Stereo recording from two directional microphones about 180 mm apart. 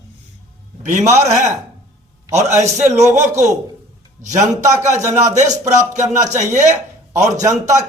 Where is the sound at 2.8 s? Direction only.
40° right (ahead or behind).